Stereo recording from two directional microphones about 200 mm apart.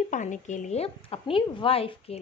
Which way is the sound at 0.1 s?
40° left (ahead or behind).